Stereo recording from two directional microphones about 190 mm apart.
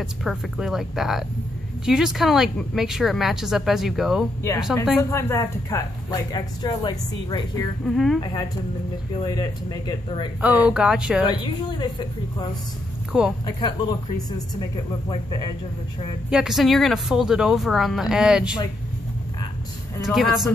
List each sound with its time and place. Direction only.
0.0 s speech: centre (ahead or behind)
5.1 s speech: 15° left (ahead or behind)
7.8 s speech: centre (ahead or behind)
8.2 s speech: 25° left (ahead or behind)
10.4 s speech: 5° right (ahead or behind)
11.4 s speech: 25° left (ahead or behind)
13.1 s speech: 5° right (ahead or behind)
13.5 s speech: 20° left (ahead or behind)
16.3 s speech: 5° right (ahead or behind)
20.1 s speech: centre (ahead or behind)